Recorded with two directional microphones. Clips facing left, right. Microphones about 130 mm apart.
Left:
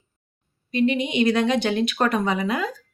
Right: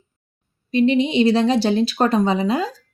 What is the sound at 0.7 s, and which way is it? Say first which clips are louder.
A woman's voice: right 5 dB; 30° right (ahead or behind).